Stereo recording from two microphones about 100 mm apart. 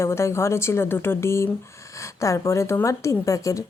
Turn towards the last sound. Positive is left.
turn(degrees=35)  # may be behind; listen again after turning